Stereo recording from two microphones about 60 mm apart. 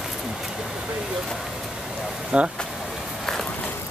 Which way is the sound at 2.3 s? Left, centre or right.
Centre.